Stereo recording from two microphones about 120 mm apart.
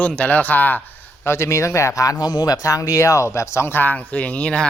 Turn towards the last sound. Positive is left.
turn(degrees=10)  # may be behind; listen again after turning